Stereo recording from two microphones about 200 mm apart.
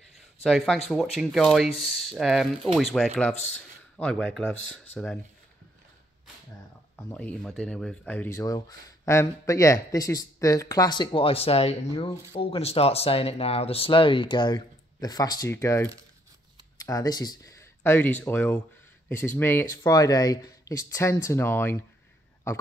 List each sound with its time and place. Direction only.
0.4 s speech: centre (ahead or behind)
7.0 s speech: 10° left (ahead or behind)